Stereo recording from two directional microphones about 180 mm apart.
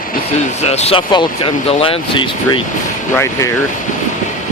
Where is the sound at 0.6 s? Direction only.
35° left (ahead or behind).